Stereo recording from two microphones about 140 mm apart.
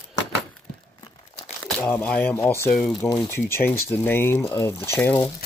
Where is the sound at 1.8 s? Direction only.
10° left (ahead or behind).